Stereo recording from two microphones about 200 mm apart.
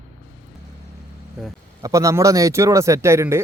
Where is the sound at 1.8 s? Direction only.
15° right (ahead or behind).